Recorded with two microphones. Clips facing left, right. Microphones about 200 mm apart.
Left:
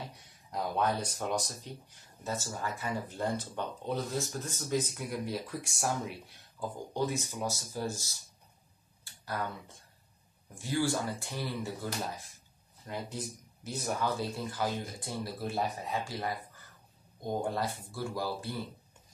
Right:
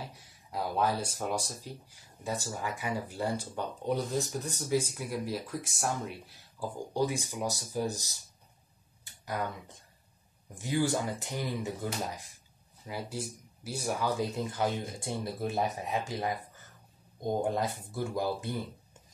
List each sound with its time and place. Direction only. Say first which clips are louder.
0.0 s speech: right 1 dB; 5° right (ahead or behind)
4.8 s speech: right 1 dB; centre (ahead or behind); by 11.9 s 15° right (ahead or behind)
12.8 s speech: right 1 dB; 5° right (ahead or behind)
17.2 s speech: right 3 dB; 20° right (ahead or behind)